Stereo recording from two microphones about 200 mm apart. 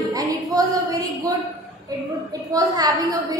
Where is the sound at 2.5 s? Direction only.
20° right (ahead or behind).